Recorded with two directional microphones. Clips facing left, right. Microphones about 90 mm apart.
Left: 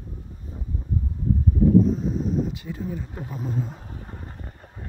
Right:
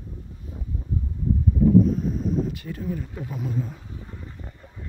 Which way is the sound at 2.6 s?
10° left (ahead or behind).